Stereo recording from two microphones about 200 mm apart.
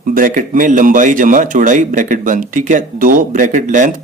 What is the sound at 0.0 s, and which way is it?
Speech, 45° right (ahead or behind).